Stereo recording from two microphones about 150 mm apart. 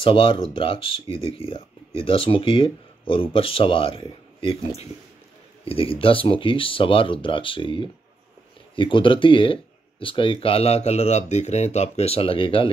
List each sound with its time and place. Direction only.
0.0 s speech: 35° left (ahead or behind)